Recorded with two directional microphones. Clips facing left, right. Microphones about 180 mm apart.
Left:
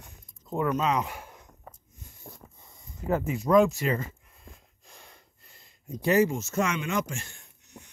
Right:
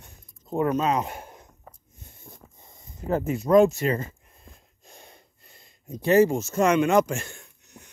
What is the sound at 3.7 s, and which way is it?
Speech, 45° right (ahead or behind).